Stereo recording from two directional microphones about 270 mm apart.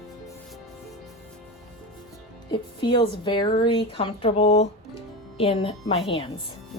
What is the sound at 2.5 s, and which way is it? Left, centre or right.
A woman's voice, centre.